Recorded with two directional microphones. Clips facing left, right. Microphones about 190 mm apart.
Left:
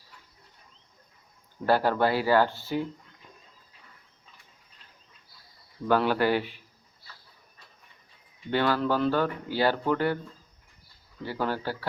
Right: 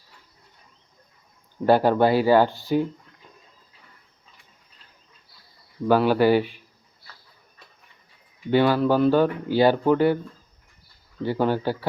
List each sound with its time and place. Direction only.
1.6 s speech: 20° right (ahead or behind)
5.9 s speech: 10° right (ahead or behind)
8.4 s speech: 15° right (ahead or behind)
11.2 s speech: 20° right (ahead or behind)